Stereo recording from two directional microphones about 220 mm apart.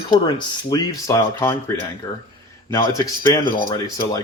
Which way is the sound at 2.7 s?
15° left (ahead or behind).